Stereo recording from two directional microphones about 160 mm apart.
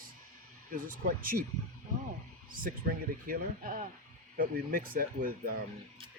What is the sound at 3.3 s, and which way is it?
Speech, 60° right (ahead or behind).